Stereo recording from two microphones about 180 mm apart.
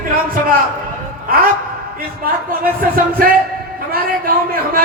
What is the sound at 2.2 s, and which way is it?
A man's voice, 55° right (ahead or behind).